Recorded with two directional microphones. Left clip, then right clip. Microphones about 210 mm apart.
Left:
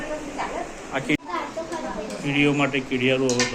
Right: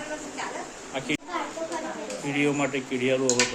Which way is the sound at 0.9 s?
10° right (ahead or behind).